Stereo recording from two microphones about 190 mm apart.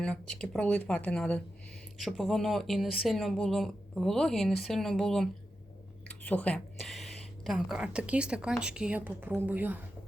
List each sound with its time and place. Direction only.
0.0 s speech: 5° left (ahead or behind)